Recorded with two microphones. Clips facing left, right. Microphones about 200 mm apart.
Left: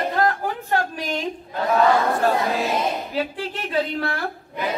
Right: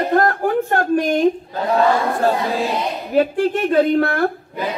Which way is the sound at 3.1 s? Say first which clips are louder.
Right 10 dB; 50° right (ahead or behind).